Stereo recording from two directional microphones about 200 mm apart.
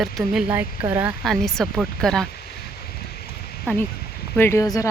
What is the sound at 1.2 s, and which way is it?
Speech, centre (ahead or behind).